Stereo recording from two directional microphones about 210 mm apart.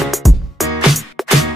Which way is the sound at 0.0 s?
Centre (ahead or behind).